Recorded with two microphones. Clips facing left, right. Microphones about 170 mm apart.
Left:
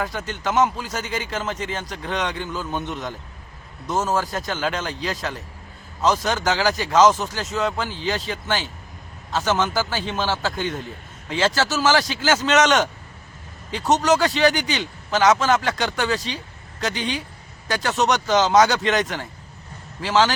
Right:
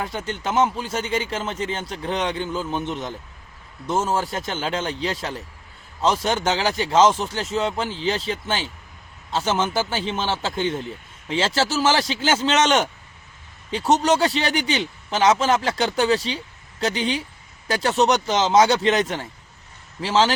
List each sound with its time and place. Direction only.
0.0 s speech: 30° right (ahead or behind)